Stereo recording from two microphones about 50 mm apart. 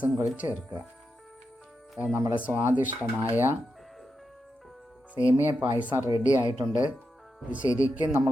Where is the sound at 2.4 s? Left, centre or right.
Right.